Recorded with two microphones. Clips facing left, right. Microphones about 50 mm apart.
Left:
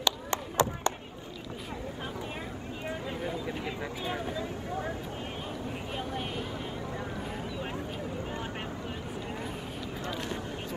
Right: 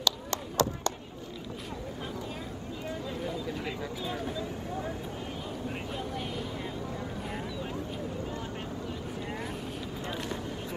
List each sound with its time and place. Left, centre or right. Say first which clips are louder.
0.0 s chop: left 1 dB; left
2.9 s vehicle: left 1 dB; left
5.9 s vehicle: left 1 dB; left